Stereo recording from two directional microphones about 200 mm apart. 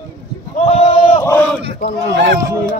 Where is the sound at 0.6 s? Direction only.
30° left (ahead or behind).